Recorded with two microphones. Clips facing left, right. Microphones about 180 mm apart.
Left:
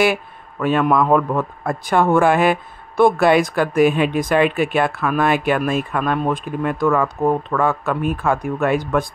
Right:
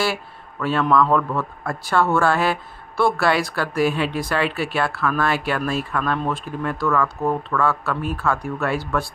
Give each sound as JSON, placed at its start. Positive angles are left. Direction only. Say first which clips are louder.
{"t": 0.0, "sound": "a man's voice", "louder": "left 6 dB", "side_deg": 15}